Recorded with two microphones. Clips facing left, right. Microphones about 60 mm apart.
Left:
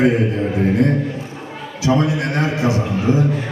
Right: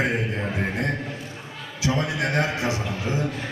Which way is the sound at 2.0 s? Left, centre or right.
Left.